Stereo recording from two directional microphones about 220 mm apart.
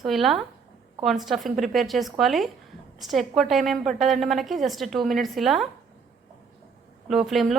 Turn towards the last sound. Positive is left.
turn(degrees=0)  # may be behind; listen again after turning